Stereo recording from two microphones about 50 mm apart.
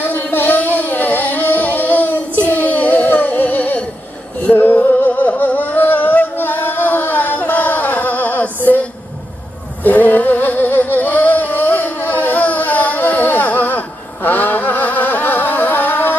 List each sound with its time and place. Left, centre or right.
0.0 s music: left
9.8 s music: left